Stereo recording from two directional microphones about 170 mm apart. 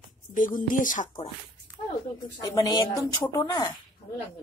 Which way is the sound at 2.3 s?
25° left (ahead or behind).